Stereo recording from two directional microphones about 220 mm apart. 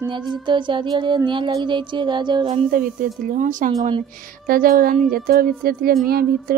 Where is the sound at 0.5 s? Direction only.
20° right (ahead or behind).